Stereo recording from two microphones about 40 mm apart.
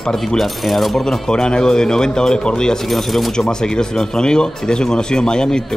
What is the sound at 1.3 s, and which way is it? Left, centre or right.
Speech, centre.